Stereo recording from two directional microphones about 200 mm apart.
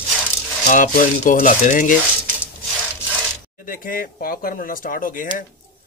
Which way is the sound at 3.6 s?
45° left (ahead or behind).